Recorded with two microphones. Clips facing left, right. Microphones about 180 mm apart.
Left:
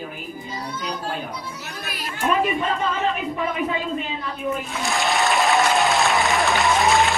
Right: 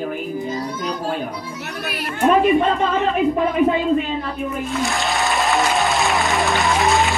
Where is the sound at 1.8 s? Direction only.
60° right (ahead or behind).